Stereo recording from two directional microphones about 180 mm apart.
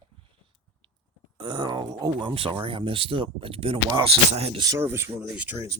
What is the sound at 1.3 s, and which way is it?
Speech, 25° right (ahead or behind).